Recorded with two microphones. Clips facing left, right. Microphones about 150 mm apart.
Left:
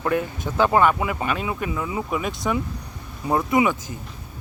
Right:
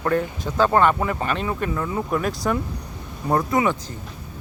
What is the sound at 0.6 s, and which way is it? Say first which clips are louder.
Speech: even; 10° left (ahead or behind).